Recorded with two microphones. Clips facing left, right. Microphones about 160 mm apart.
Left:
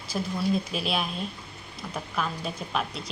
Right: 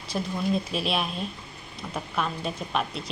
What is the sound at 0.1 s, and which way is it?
A woman's voice, centre (ahead or behind).